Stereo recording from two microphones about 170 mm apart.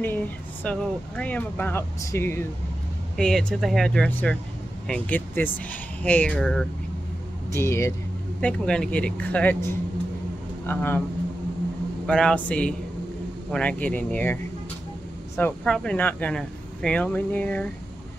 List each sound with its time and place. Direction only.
0.0 s speech: 10° left (ahead or behind)
10.7 s speech: 10° left (ahead or behind)
12.1 s speech: 5° left (ahead or behind)